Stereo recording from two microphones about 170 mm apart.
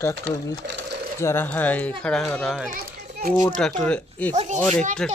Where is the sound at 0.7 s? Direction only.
90° right.